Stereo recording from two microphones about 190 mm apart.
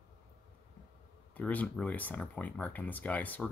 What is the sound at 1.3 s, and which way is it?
Speech, 10° left (ahead or behind).